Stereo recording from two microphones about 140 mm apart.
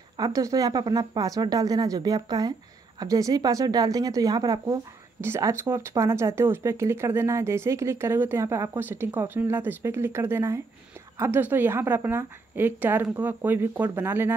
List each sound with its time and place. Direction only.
0.2 s a woman's voice: 25° right (ahead or behind)